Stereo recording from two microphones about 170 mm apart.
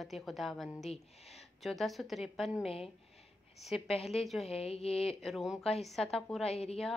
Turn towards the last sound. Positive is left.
turn(degrees=35)  # may be behind; listen again after turning